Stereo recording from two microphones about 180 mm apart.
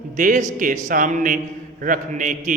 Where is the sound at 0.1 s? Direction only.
45° right (ahead or behind).